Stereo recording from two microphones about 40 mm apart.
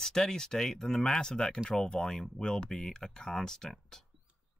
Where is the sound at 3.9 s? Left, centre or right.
Centre.